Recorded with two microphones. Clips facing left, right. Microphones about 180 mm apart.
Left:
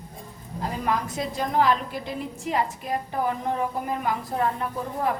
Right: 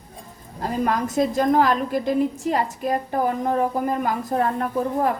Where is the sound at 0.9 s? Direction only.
45° right (ahead or behind).